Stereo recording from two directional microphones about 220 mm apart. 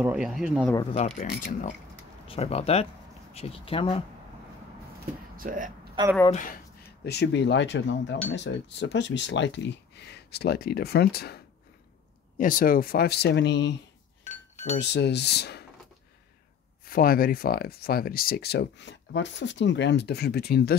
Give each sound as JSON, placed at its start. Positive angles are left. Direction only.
{"t": 0.0, "sound": "speech", "side_deg": -5}
{"t": 0.9, "sound": "speech", "side_deg": 30}
{"t": 5.3, "sound": "speech", "side_deg": -40}
{"t": 6.0, "sound": "speech", "side_deg": -20}
{"t": 6.3, "sound": "speech", "side_deg": 40}
{"t": 7.1, "sound": "speech", "side_deg": 50}
{"t": 14.8, "sound": "speech", "side_deg": 50}
{"t": 16.8, "sound": "speech", "side_deg": 40}